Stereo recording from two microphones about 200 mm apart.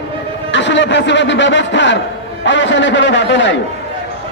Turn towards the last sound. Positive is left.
turn(degrees=65)  # may be behind; listen again after turning